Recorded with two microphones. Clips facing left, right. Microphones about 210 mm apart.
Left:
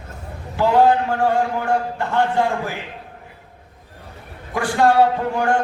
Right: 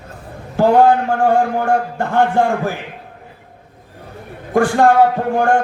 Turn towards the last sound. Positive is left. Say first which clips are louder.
# right 4 dB
turn(degrees=-50)  # may be behind; listen again after turning